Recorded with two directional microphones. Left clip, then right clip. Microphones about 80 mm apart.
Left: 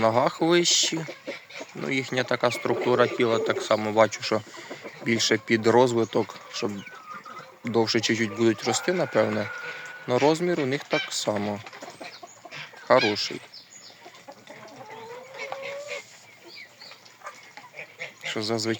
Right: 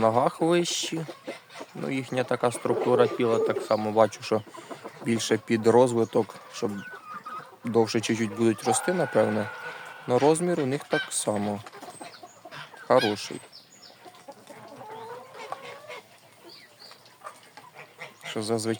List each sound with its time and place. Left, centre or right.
0.0 s a man's voice: centre; by 11.4 s right
12.9 s speech: right
18.2 s speech: right